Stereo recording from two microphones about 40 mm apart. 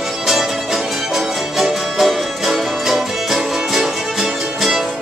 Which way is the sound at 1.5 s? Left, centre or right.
Centre.